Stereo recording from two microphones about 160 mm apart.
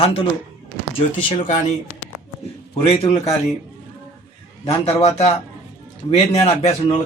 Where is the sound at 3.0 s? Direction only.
25° left (ahead or behind).